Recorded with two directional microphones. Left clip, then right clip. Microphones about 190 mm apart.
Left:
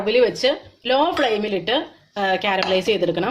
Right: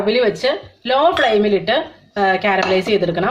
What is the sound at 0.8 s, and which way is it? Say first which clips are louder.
Speech: right 4 dB; 40° left (ahead or behind).